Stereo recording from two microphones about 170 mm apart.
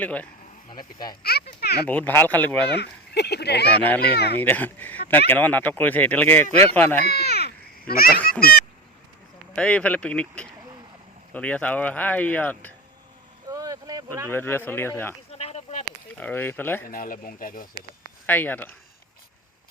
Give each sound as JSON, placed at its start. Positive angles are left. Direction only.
{"t": 0.0, "sound": "speech", "side_deg": 10}
{"t": 1.2, "sound": "a sound", "side_deg": 65}
{"t": 1.9, "sound": "speech", "side_deg": 10}
{"t": 2.6, "sound": "speech", "side_deg": 75}
{"t": 4.4, "sound": "speech", "side_deg": 10}
{"t": 7.0, "sound": "speech", "side_deg": 70}
{"t": 9.6, "sound": "speech", "side_deg": 5}
{"t": 13.5, "sound": "vehicle", "side_deg": -20}
{"t": 14.3, "sound": "speech", "side_deg": 15}
{"t": 15.3, "sound": "a sound", "side_deg": 40}
{"t": 16.1, "sound": "speech", "side_deg": 10}
{"t": 16.9, "sound": "speech", "side_deg": 55}
{"t": 18.3, "sound": "speech", "side_deg": 10}